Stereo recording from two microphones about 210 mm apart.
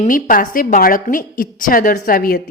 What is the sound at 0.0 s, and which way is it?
A woman's voice, 40° left (ahead or behind).